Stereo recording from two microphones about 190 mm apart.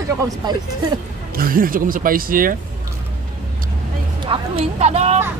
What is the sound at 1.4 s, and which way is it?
Speech, 50° right (ahead or behind).